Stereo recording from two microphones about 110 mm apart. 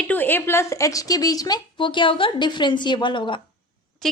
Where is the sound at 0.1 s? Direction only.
15° left (ahead or behind); by 3.4 s 50° left (ahead or behind).